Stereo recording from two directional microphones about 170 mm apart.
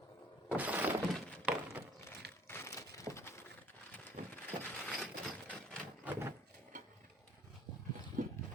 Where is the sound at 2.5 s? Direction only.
15° left (ahead or behind).